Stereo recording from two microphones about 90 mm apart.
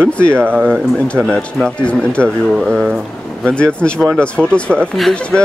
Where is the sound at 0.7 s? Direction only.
10° left (ahead or behind).